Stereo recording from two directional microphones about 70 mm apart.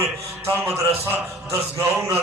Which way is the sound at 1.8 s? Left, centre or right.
Right.